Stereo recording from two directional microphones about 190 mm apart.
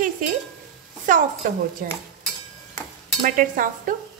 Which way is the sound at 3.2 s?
45° right (ahead or behind).